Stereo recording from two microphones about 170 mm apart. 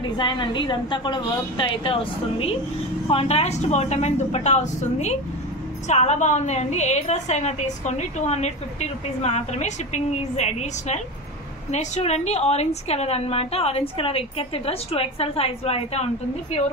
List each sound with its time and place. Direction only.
0.2 s a woman's voice: 25° left (ahead or behind)